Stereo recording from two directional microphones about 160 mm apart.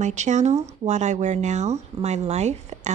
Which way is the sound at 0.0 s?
45° right (ahead or behind).